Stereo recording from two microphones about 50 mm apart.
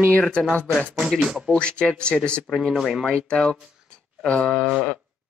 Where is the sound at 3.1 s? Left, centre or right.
Centre.